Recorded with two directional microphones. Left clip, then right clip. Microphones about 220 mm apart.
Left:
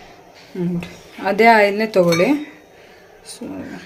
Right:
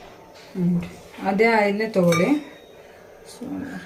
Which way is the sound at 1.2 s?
50° left (ahead or behind).